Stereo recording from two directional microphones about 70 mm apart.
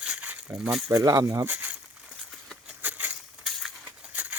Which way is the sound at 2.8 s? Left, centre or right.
Right.